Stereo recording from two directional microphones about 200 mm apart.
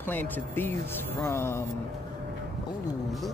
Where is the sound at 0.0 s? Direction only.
10° left (ahead or behind).